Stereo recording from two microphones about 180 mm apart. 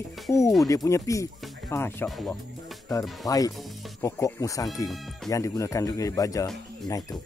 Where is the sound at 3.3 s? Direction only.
20° left (ahead or behind).